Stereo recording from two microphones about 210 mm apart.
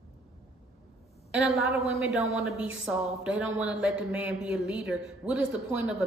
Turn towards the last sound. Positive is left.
turn(degrees=-5)  # may be behind; listen again after turning